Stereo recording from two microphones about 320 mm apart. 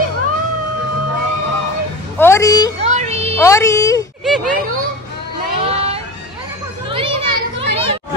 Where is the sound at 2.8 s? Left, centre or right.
Right.